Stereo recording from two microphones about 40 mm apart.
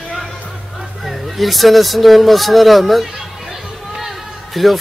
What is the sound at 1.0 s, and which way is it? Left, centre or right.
Speech, centre.